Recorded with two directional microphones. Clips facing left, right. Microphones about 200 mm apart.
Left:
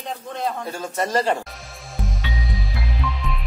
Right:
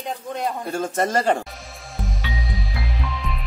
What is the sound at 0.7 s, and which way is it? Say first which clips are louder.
Speech: right 2 dB; 50° right (ahead or behind).